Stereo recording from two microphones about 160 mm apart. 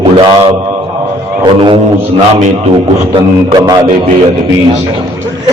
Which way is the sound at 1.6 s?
30° right (ahead or behind).